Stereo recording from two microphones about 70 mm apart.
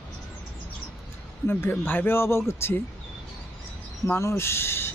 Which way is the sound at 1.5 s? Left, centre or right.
Left.